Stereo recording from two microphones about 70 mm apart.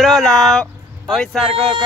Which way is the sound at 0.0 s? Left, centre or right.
Centre.